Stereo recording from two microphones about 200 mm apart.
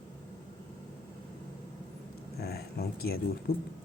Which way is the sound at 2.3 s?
50° left (ahead or behind).